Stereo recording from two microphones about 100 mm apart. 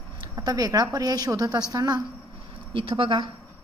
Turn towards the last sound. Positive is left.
turn(degrees=-55)  # may be behind; listen again after turning